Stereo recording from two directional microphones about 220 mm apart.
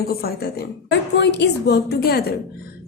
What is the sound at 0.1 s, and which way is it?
A woman's voice, 45° left (ahead or behind).